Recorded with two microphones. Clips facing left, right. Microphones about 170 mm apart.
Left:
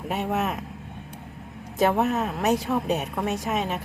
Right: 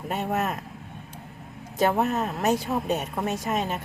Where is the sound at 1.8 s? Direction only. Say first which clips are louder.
Left 1 dB; centre (ahead or behind).